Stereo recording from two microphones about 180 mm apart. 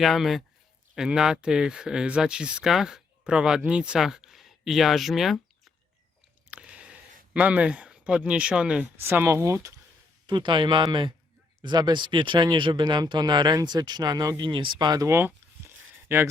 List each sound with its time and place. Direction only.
0.0 s speech: centre (ahead or behind)
6.5 s a sound: 5° right (ahead or behind)
7.3 s speech: 10° right (ahead or behind)